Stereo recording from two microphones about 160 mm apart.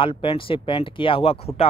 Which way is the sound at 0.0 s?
35° left (ahead or behind).